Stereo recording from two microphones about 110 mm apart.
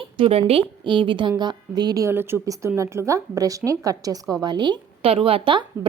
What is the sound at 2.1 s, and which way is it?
A woman's voice, 20° right (ahead or behind).